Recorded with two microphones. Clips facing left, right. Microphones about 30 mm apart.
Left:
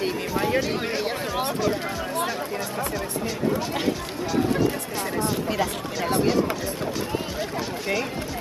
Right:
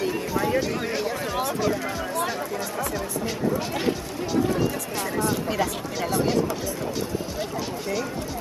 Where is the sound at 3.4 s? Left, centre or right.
Left.